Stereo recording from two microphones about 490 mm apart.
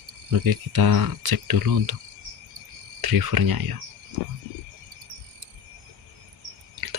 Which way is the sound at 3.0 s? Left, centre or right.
Right.